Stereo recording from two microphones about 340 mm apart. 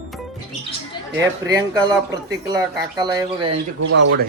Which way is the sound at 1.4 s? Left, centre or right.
Centre.